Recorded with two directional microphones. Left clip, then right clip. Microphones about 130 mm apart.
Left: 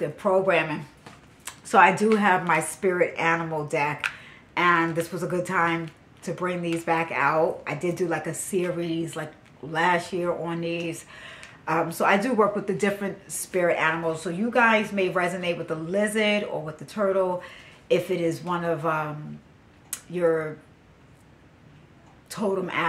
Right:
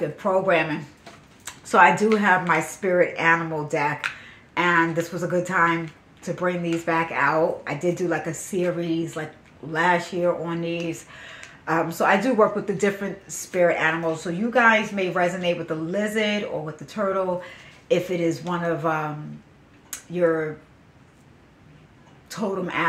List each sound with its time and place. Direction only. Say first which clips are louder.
0.0 s speech: even; 20° left (ahead or behind)
22.3 s speech: even; 20° left (ahead or behind)